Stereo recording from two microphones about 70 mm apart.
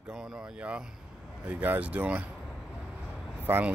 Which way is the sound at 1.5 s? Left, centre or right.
Right.